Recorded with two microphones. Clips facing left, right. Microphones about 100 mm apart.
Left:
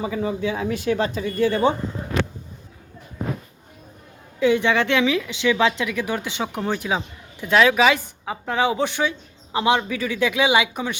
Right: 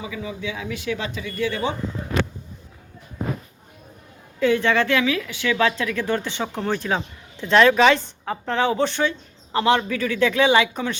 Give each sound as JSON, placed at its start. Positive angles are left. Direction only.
{"t": 0.0, "sound": "speech", "side_deg": 45}
{"t": 4.4, "sound": "a woman's voice", "side_deg": 15}